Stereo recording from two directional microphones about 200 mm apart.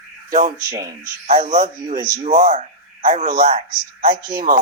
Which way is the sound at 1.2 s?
40° right (ahead or behind).